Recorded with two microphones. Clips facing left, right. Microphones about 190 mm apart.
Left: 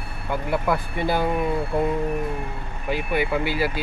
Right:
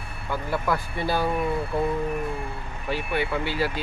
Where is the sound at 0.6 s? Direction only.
20° left (ahead or behind).